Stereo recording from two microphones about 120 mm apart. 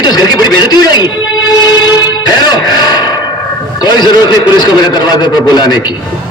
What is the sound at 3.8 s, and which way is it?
A man's voice, 40° left (ahead or behind).